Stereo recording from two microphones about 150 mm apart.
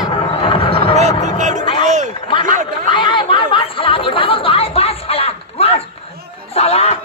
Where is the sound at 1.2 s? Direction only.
55° right (ahead or behind).